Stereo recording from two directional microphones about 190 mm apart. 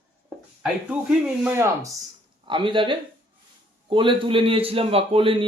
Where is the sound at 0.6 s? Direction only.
5° right (ahead or behind).